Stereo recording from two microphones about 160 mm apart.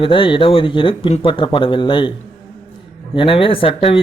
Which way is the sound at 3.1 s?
35° left (ahead or behind).